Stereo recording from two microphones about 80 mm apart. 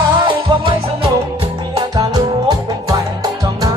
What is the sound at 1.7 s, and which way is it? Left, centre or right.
Music, right.